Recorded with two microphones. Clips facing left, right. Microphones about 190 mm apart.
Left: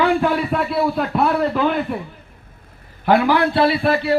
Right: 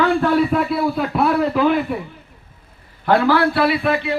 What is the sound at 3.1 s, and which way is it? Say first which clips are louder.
A man's voice: even; 15° left (ahead or behind).